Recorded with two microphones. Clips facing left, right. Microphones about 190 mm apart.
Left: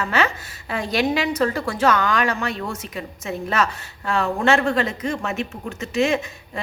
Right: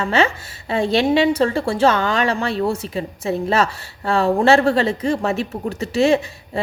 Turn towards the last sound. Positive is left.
turn(degrees=-30)  # may be behind; listen again after turning